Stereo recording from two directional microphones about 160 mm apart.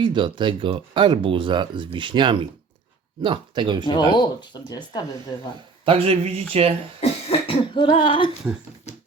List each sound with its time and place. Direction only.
0.0 s speech: 30° right (ahead or behind)
4.1 s speech: 25° left (ahead or behind)
5.8 s speech: 35° right (ahead or behind)
7.0 s cough: 35° left (ahead or behind)